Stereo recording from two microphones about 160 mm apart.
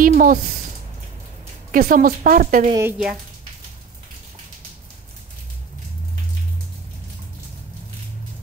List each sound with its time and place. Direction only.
0.0 s a woman's voice: 60° right (ahead or behind)
1.7 s a woman's voice: 60° right (ahead or behind)
2.7 s speech: 15° right (ahead or behind)